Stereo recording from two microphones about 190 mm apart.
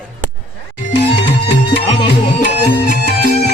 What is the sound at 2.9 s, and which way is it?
Music, 60° left (ahead or behind).